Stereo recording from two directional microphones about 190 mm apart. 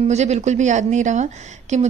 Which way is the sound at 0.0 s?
35° right (ahead or behind).